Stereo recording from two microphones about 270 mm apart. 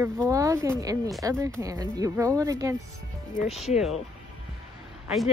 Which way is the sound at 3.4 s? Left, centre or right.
Left.